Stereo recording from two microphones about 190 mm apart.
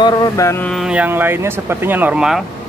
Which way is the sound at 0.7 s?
5° right (ahead or behind).